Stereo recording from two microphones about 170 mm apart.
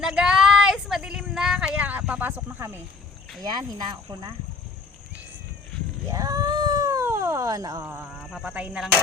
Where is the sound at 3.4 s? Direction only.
25° right (ahead or behind).